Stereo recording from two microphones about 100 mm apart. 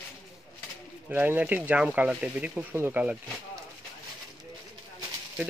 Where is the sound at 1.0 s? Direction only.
15° right (ahead or behind).